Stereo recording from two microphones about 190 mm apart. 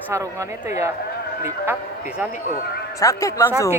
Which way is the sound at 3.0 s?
15° left (ahead or behind).